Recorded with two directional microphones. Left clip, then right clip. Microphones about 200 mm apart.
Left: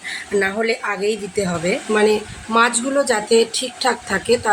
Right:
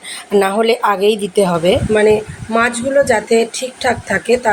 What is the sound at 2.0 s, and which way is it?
Speech, centre (ahead or behind).